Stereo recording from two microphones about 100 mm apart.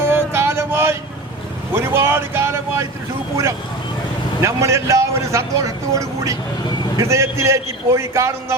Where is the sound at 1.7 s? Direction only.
25° right (ahead or behind).